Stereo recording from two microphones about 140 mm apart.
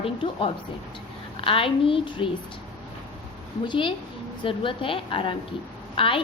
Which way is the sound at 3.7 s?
35° left (ahead or behind).